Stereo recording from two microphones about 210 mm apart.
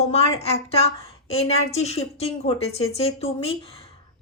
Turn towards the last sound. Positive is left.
turn(degrees=25)  # may be behind; listen again after turning